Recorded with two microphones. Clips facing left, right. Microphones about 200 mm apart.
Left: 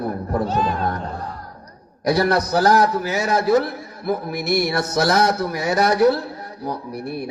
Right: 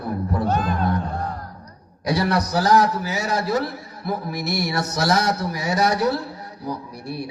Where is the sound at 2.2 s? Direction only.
50° left (ahead or behind).